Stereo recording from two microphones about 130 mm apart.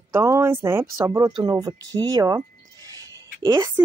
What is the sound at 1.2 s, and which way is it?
Speech, 30° right (ahead or behind).